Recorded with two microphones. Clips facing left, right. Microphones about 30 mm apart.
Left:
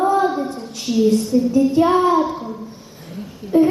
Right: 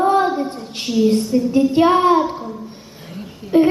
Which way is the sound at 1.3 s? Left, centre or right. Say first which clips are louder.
Left 1 dB; right.